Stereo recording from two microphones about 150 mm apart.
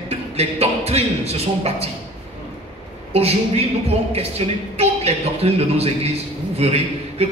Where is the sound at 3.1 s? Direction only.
45° right (ahead or behind).